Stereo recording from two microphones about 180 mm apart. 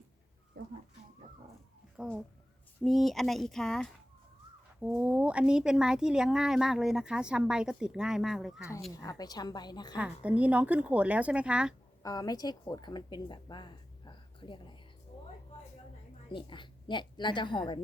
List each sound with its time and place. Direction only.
0.6 s a sound: 65° right (ahead or behind)
2.0 s speech: centre (ahead or behind)
9.0 s a woman's voice: 20° left (ahead or behind)
10.0 s speech: 5° right (ahead or behind)
12.0 s speech: 20° left (ahead or behind)
16.3 s a woman's voice: 25° left (ahead or behind)